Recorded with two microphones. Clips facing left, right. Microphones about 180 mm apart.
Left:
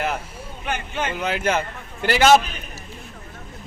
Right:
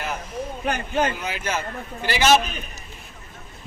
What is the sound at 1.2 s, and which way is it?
A man's voice, 60° left (ahead or behind).